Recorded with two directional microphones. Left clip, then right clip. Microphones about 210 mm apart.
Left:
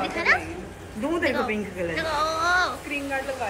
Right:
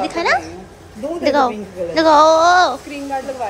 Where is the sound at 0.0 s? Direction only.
15° right (ahead or behind).